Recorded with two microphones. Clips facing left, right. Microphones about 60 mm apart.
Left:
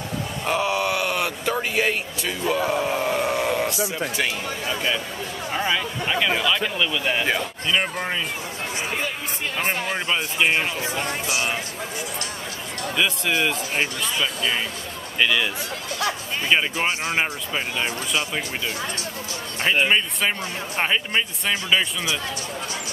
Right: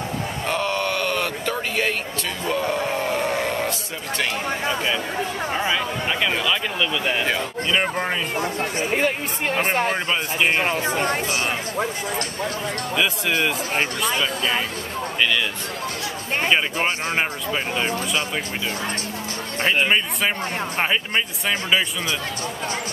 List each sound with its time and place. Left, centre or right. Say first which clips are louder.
0.5 s a sound: left 2 dB; centre
2.4 s speech: left 1 dB; centre
5.5 s speech: left 2 dB; centre
8.7 s speech: right 5 dB; right
12.9 s speech: even; centre
15.1 s speech: left 1 dB; centre
19.6 s speech: even; centre